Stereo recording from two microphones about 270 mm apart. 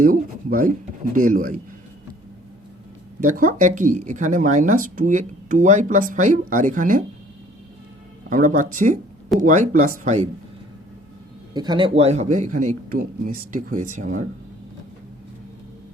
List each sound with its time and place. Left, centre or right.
0.0 s speech: right
3.2 s speech: right
8.3 s speech: right
11.5 s speech: centre